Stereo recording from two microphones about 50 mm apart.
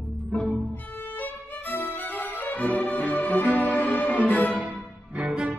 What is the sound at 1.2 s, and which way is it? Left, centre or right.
Music, left.